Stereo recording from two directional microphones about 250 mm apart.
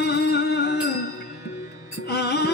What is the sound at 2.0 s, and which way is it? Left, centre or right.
Music, left.